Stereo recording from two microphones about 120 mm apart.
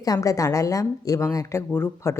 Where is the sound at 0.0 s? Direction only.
30° left (ahead or behind).